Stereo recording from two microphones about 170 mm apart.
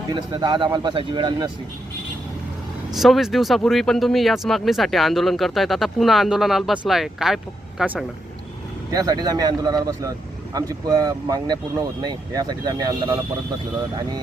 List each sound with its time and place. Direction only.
0.1 s speech: 25° right (ahead or behind)
2.9 s speech: centre (ahead or behind)
8.9 s speech: 20° right (ahead or behind)